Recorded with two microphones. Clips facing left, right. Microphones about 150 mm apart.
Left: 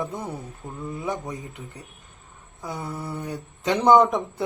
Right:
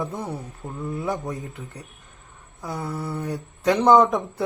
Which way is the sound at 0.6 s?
20° right (ahead or behind).